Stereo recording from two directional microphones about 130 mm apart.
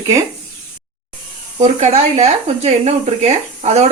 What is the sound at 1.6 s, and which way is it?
Speech, 55° right (ahead or behind).